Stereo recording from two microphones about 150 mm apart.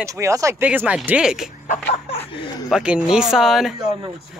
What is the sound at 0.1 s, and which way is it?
Speech, 20° right (ahead or behind).